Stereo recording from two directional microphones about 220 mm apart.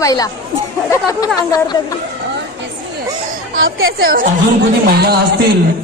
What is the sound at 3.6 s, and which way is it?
Speech, 65° right (ahead or behind).